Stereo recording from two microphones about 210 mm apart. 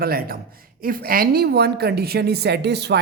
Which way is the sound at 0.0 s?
45° right (ahead or behind).